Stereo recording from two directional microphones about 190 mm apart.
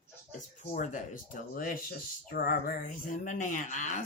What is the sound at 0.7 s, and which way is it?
Speech, 45° left (ahead or behind).